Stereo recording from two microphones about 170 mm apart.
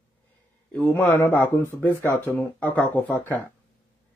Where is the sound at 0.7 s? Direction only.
10° left (ahead or behind).